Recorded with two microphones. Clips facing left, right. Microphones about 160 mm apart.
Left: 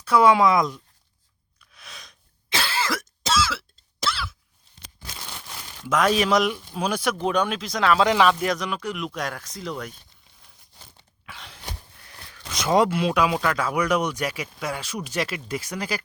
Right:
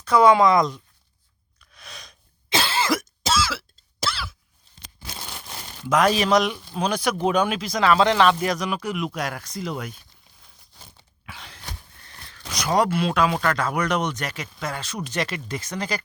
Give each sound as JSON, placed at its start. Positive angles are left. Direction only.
{"t": 0.0, "sound": "speech", "side_deg": 5}
{"t": 1.7, "sound": "gasp", "side_deg": 0}
{"t": 2.5, "sound": "cough", "side_deg": -20}
{"t": 3.2, "sound": "cough", "side_deg": 0}
{"t": 5.9, "sound": "speech", "side_deg": 0}
{"t": 11.3, "sound": "a sound", "side_deg": 0}
{"t": 12.5, "sound": "speech", "side_deg": 20}